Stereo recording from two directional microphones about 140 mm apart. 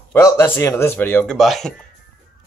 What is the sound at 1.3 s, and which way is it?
Speech, centre (ahead or behind).